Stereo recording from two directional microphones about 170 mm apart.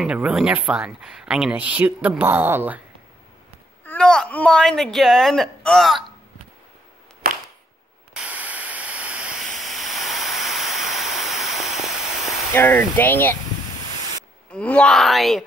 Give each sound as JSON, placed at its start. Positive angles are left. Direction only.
{"t": 0.0, "sound": "speech", "side_deg": -5}
{"t": 3.8, "sound": "a woman's voice", "side_deg": 5}
{"t": 7.2, "sound": "a sound", "side_deg": -60}
{"t": 8.1, "sound": "static", "side_deg": -5}
{"t": 9.6, "sound": "hiss", "side_deg": 0}
{"t": 12.5, "sound": "speech", "side_deg": 10}
{"t": 14.5, "sound": "a woman's voice", "side_deg": 5}